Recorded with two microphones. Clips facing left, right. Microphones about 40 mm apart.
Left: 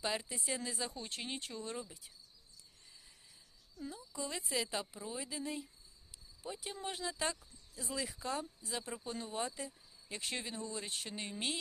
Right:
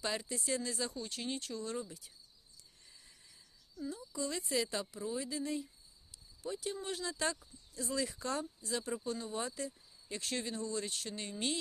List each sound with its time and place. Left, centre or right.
0.0 s speech: centre
0.9 s speech: left
1.8 s speech: centre
3.8 s speech: centre
6.4 s speech: centre